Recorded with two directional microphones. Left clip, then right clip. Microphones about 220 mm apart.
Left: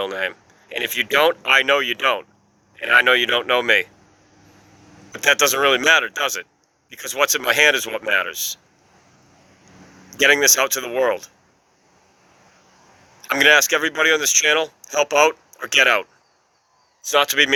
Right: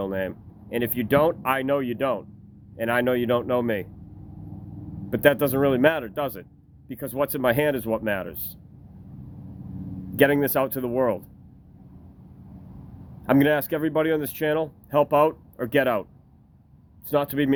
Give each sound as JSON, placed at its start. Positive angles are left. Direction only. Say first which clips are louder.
{"t": 0.9, "sound": "speech", "louder": "left 5 dB", "side_deg": -5}
{"t": 5.3, "sound": "speech", "louder": "left 6 dB", "side_deg": 0}
{"t": 10.2, "sound": "speech", "louder": "left 5 dB", "side_deg": -5}
{"t": 13.2, "sound": "speech", "louder": "left 7 dB", "side_deg": -5}